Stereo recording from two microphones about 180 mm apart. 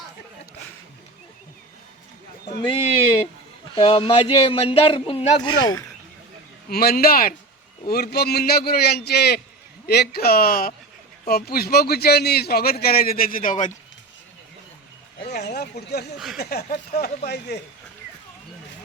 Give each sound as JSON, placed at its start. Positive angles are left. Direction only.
{"t": 2.6, "sound": "speech", "side_deg": 30}
{"t": 6.7, "sound": "a man's voice", "side_deg": 55}
{"t": 15.3, "sound": "a man's voice", "side_deg": 60}